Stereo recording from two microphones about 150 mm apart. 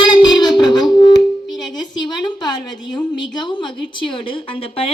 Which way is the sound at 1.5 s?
30° left (ahead or behind).